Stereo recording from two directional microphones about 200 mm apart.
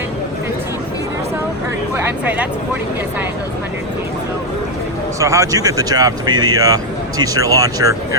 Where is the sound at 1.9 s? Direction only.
10° right (ahead or behind).